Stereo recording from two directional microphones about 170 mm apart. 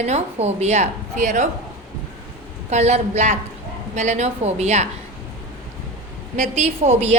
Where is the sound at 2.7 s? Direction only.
40° right (ahead or behind).